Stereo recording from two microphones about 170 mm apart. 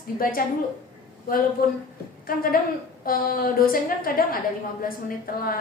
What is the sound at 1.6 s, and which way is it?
A woman's voice, 60° left (ahead or behind).